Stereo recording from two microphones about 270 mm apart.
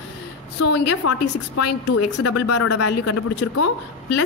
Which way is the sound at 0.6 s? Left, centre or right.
Left.